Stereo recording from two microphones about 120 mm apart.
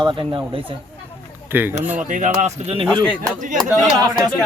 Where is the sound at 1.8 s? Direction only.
15° right (ahead or behind).